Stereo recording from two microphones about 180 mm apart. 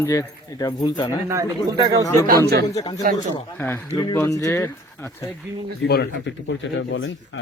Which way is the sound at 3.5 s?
10° left (ahead or behind).